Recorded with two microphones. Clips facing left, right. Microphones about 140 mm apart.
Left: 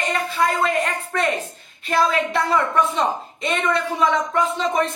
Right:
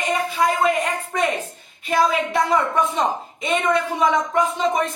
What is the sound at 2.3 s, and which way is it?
Speech, 10° right (ahead or behind).